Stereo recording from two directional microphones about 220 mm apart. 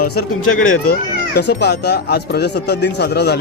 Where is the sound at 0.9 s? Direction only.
45° left (ahead or behind).